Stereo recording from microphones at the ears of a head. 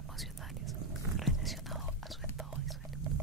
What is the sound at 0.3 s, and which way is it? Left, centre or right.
Whispering, right.